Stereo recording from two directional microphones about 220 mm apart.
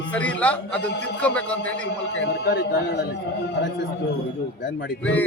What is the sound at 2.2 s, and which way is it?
Speech, 50° left (ahead or behind).